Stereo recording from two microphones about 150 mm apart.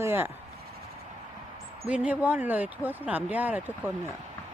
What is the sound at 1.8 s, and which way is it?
Speech, 10° right (ahead or behind).